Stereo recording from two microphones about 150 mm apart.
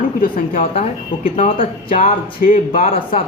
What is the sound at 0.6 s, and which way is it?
Speech, 40° left (ahead or behind).